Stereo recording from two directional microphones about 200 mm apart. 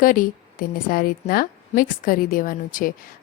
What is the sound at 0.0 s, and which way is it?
A woman's voice, 45° left (ahead or behind).